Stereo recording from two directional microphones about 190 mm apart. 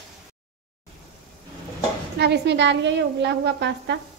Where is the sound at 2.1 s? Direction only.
65° right (ahead or behind).